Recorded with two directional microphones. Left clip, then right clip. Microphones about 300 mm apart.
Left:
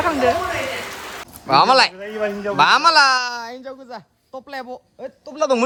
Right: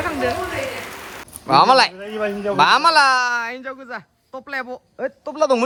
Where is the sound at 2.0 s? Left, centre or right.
Right.